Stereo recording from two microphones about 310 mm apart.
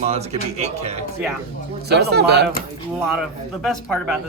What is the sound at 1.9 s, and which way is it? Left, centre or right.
Speech, right.